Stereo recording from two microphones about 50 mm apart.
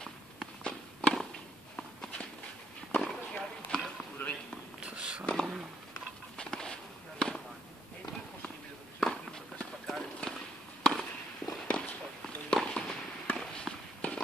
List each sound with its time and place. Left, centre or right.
0.0 s walk: centre
1.8 s walk: left
2.9 s a sound: centre
4.8 s a sound: centre
5.2 s a sound: centre
6.3 s walk: centre
9.0 s clip-clop: centre
10.8 s fireworks: centre
11.6 s walk: left
12.4 s fireworks: centre